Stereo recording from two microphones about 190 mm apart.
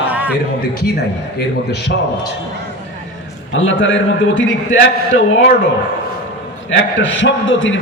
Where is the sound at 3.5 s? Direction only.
90° left.